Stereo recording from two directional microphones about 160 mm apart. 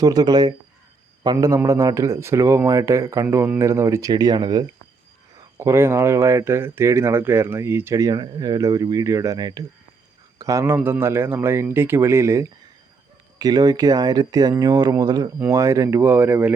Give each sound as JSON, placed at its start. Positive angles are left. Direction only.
{"t": 0.0, "sound": "a man's voice", "side_deg": -25}